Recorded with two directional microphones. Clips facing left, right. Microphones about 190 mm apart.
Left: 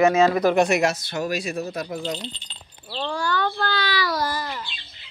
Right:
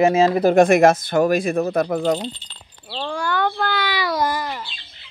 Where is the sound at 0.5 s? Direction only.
50° right (ahead or behind).